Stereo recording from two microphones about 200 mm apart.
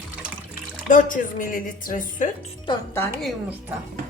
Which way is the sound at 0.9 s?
40° left (ahead or behind).